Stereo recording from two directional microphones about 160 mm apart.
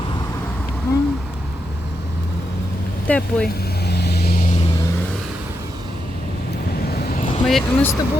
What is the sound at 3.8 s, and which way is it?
Vehicle, 90° left.